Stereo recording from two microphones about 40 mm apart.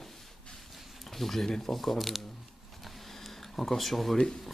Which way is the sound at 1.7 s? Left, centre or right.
Centre.